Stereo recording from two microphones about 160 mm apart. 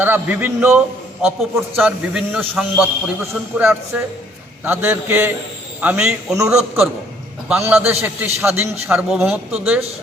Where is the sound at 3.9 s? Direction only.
10° right (ahead or behind).